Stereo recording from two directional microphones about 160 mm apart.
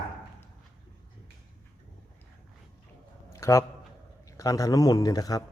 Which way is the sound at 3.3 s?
20° left (ahead or behind).